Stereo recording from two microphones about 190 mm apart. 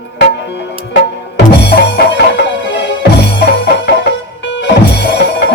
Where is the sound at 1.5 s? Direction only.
65° left (ahead or behind).